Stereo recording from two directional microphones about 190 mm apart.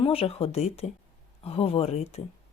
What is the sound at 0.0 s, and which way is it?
Speech, 30° left (ahead or behind).